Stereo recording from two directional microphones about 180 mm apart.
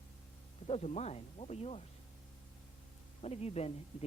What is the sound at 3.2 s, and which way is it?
Speech, 35° left (ahead or behind).